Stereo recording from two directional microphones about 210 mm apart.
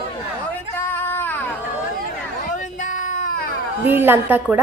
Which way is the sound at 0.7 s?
10° left (ahead or behind).